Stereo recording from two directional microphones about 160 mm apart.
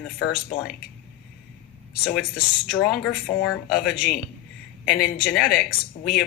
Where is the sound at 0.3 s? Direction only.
55° left (ahead or behind).